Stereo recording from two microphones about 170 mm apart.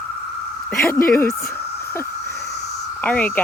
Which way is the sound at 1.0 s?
55° left (ahead or behind).